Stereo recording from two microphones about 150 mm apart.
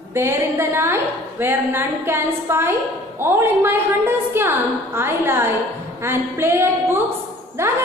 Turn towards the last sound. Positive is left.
turn(degrees=-15)  # may be behind; listen again after turning